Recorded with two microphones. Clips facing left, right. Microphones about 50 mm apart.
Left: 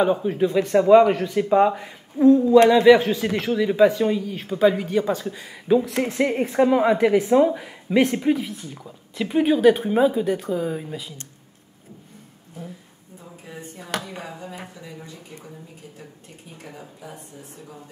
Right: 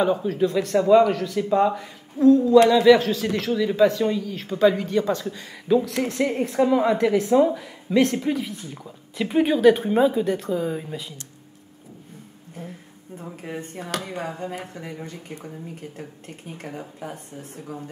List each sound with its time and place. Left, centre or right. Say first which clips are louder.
0.0 s speech: left 1 dB; centre
13.2 s speech: right 5 dB; right